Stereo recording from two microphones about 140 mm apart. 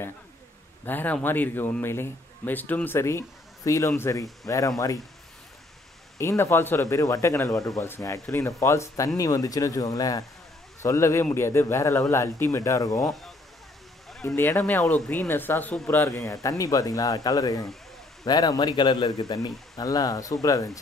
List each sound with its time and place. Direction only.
0.8 s a man's voice: 10° left (ahead or behind)
6.1 s speech: 20° left (ahead or behind)
14.2 s a man's voice: 15° left (ahead or behind)